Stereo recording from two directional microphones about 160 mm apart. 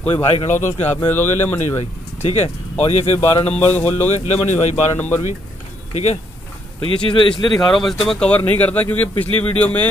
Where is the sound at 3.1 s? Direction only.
15° left (ahead or behind).